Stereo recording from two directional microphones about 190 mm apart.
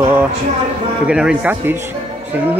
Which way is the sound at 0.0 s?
10° right (ahead or behind).